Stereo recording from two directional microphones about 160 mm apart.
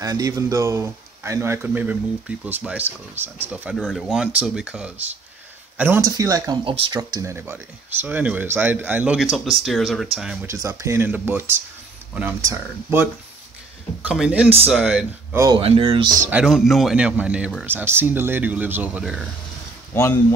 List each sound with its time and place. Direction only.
0.0 s speech: 20° right (ahead or behind)
6.6 s speech: 35° right (ahead or behind)
7.0 s speech: 20° right (ahead or behind)
10.4 s speech: 20° right (ahead or behind)
15.5 s speech: 30° right (ahead or behind)
16.3 s speech: 5° right (ahead or behind)
19.9 s speech: 15° left (ahead or behind)